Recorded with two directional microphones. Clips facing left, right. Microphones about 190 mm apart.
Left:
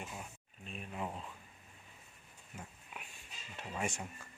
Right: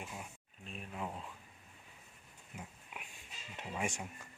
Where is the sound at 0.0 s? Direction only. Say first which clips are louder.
Even; 5° right (ahead or behind).